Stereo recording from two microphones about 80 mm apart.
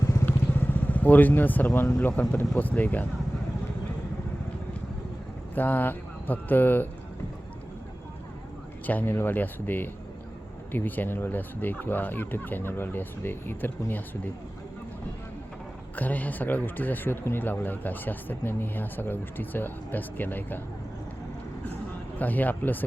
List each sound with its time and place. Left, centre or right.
0.0 s vehicle: left
0.3 s vehicle: left
2.6 s speech: left
5.5 s speech: left
8.9 s speech: left
16.0 s speech: left
22.2 s speech: left